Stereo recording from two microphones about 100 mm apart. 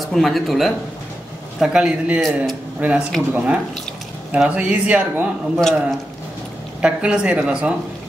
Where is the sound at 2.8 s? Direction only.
15° right (ahead or behind).